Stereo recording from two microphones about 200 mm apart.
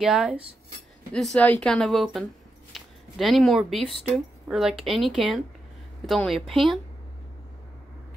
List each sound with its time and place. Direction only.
0.0 s speech: 5° right (ahead or behind)